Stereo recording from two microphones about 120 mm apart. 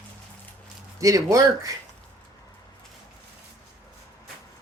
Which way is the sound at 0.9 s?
30° right (ahead or behind).